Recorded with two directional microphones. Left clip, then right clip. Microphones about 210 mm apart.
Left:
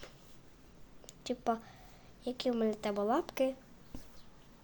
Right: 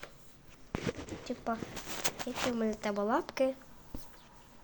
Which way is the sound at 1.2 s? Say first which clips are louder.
Left 3 dB; 10° left (ahead or behind).